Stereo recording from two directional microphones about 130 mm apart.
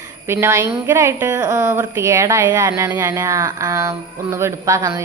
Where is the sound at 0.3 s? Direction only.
20° right (ahead or behind).